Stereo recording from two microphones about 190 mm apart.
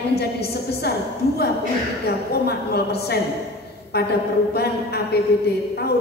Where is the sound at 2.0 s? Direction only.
55° left (ahead or behind).